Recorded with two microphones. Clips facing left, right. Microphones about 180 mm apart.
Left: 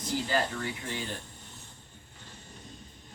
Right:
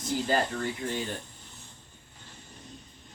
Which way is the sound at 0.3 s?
45° right (ahead or behind).